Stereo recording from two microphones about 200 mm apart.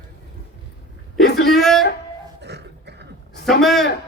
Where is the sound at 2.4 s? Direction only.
55° right (ahead or behind).